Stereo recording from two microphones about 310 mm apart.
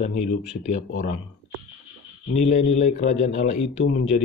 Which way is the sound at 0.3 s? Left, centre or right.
Left.